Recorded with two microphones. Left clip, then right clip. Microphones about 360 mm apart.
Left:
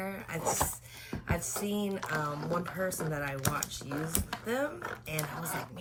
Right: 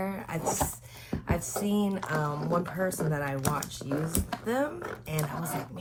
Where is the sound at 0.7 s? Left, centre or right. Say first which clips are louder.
Right 3 dB; centre.